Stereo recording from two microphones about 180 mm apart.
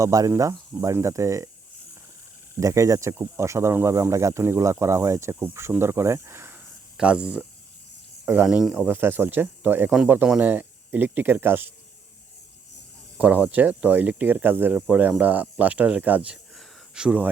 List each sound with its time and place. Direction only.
0.0 s speech: 20° right (ahead or behind)
2.6 s speech: 15° right (ahead or behind)
13.1 s speech: 5° right (ahead or behind)